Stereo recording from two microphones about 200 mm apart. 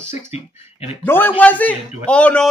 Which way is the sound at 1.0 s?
10° left (ahead or behind).